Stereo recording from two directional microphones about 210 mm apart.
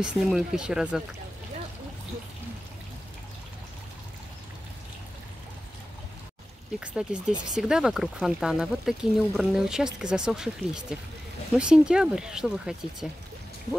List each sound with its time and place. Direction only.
0.0 s speech: 5° right (ahead or behind)
6.8 s speech: 5° right (ahead or behind)